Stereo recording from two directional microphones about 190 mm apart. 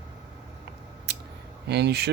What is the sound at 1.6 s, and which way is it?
Speech, 60° right (ahead or behind).